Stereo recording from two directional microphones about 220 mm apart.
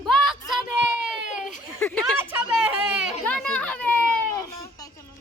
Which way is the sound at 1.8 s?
5° left (ahead or behind).